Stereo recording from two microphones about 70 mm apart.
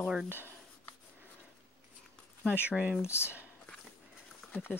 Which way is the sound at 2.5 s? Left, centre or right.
Centre.